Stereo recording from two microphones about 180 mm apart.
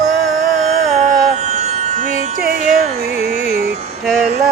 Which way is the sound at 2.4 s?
50° right (ahead or behind).